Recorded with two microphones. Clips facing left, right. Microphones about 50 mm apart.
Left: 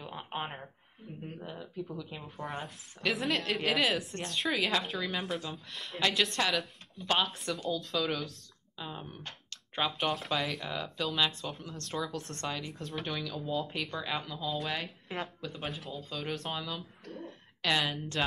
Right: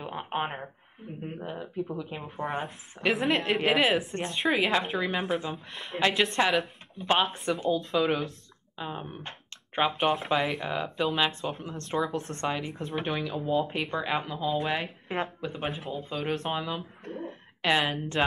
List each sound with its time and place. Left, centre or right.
0.0 s speech: right
3.1 s speech: centre
6.0 s speech: right
7.4 s speech: right
10.3 s speech: centre
10.6 s speech: right
12.0 s speech: centre
12.4 s a woman's voice: right
15.7 s speech: centre
16.1 s speech: right
16.3 s speech: centre
17.0 s a sound: centre
17.6 s speech: right